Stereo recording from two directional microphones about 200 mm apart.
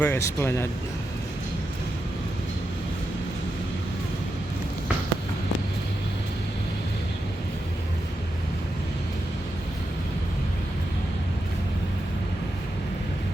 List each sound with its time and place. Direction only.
0.0 s speech: 15° left (ahead or behind)